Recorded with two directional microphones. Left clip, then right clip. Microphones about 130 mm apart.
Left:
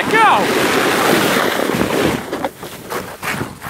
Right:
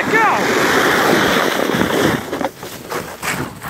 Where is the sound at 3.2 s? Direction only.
55° right (ahead or behind).